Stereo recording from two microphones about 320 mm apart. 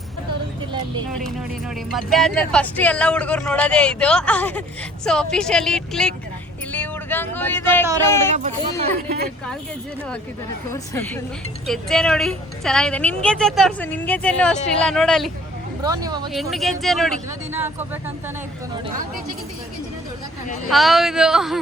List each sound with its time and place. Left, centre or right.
1.9 s a woman's voice: centre
6.7 s a sound: centre
8.4 s speech: right
10.7 s a woman's voice: centre
15.8 s speech: centre
16.3 s a woman's voice: centre
20.7 s a woman's voice: centre